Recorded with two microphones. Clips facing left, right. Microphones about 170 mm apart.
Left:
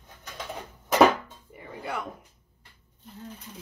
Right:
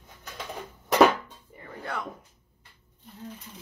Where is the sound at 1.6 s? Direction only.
10° left (ahead or behind).